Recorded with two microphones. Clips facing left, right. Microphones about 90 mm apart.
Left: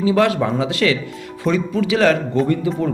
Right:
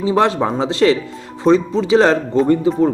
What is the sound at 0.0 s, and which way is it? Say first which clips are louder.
Speech: right 1 dB; 30° right (ahead or behind).